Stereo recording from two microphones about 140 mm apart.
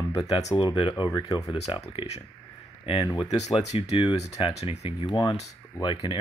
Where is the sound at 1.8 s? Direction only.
45° left (ahead or behind).